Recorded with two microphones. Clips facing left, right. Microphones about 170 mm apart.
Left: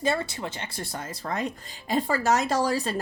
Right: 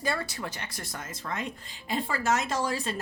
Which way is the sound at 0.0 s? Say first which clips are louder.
Left 5 dB; 25° left (ahead or behind).